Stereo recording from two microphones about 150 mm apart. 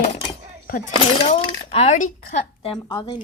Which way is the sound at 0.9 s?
40° left (ahead or behind).